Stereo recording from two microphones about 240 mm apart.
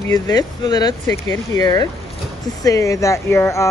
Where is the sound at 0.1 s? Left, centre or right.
Centre.